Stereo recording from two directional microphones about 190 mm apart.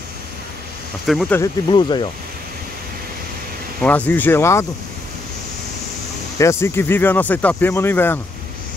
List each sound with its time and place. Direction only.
1.0 s speech: centre (ahead or behind)
1.3 s speech: 20° left (ahead or behind)
3.8 s speech: 10° left (ahead or behind)
6.6 s speech: 10° left (ahead or behind)